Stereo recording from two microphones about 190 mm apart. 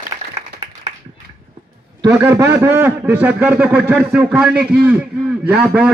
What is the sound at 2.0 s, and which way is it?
A man's voice, 15° right (ahead or behind).